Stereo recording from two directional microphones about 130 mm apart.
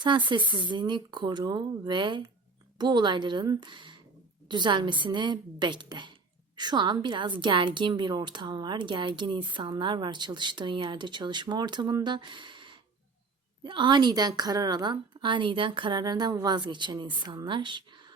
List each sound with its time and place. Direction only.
0.0 s a woman's voice: 35° right (ahead or behind)